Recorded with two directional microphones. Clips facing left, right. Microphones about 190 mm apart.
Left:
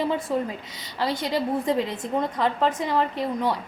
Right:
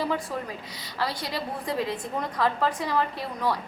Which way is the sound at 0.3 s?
25° left (ahead or behind).